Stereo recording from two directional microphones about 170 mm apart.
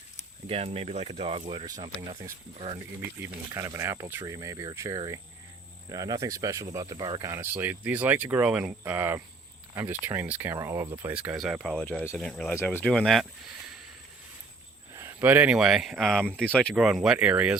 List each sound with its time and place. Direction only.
0.4 s speech: 35° right (ahead or behind)
2.7 s speech: 15° right (ahead or behind)
14.9 s speech: 15° right (ahead or behind)